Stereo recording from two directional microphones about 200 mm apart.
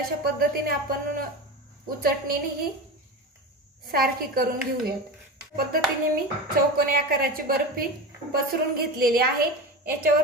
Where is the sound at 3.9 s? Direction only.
50° right (ahead or behind).